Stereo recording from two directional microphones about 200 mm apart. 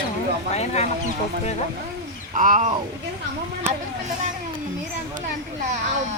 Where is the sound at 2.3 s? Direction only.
40° right (ahead or behind).